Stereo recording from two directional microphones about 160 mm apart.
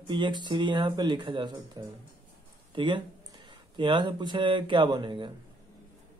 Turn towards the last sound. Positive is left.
turn(degrees=-30)  # may be behind; listen again after turning